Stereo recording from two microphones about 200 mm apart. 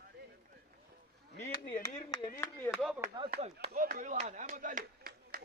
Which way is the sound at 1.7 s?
20° left (ahead or behind).